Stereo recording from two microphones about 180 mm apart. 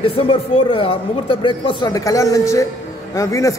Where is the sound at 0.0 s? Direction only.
30° left (ahead or behind).